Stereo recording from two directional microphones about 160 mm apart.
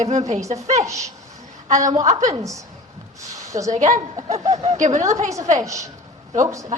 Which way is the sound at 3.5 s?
20° right (ahead or behind).